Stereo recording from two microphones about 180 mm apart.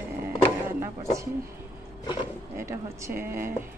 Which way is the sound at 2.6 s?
15° right (ahead or behind).